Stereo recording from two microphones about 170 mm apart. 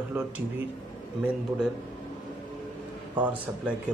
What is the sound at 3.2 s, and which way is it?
Speech, 10° right (ahead or behind).